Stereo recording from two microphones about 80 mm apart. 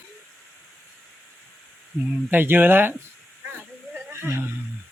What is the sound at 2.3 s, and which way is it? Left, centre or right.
Speech, right.